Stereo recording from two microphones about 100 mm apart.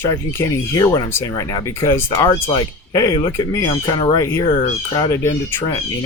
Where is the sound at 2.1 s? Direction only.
40° left (ahead or behind).